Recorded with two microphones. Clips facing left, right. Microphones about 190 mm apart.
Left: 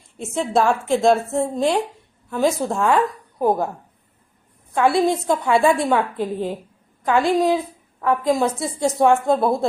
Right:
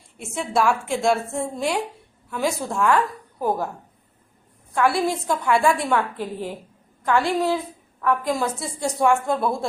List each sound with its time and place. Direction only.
0.2 s a woman's voice: 20° left (ahead or behind)
4.7 s a woman's voice: 20° left (ahead or behind)